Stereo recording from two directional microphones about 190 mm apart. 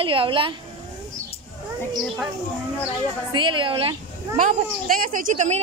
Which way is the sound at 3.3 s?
25° right (ahead or behind).